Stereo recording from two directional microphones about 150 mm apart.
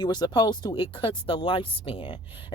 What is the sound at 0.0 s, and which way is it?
Speech, 30° left (ahead or behind).